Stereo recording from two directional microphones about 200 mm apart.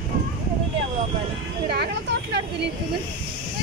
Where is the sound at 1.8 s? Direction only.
55° right (ahead or behind).